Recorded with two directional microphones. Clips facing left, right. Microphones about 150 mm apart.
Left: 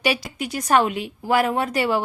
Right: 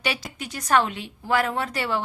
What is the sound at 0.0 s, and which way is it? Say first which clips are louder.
Speech: left 6 dB; 10° left (ahead or behind).